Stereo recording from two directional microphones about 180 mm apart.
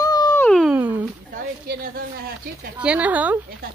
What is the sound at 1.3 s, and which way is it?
Speech, 55° right (ahead or behind).